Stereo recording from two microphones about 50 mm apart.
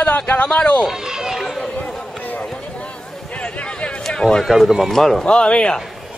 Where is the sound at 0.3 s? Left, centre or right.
Left.